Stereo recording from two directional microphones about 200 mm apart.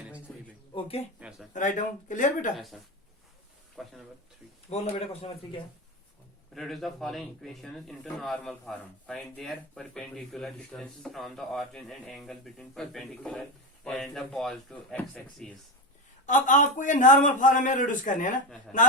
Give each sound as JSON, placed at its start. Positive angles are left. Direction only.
{"t": 0.7, "sound": "speech", "side_deg": 25}
{"t": 1.5, "sound": "a man's voice", "side_deg": 40}
{"t": 3.8, "sound": "speech", "side_deg": 5}
{"t": 4.7, "sound": "a man's voice", "side_deg": 30}
{"t": 6.5, "sound": "speech", "side_deg": 0}
{"t": 16.2, "sound": "a man's voice", "side_deg": 40}